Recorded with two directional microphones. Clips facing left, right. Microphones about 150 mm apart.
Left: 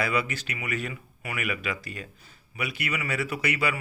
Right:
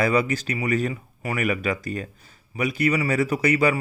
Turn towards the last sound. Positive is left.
turn(degrees=-40)  # may be behind; listen again after turning